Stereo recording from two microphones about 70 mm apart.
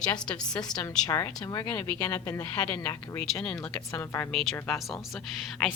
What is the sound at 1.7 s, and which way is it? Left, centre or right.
Speech, left.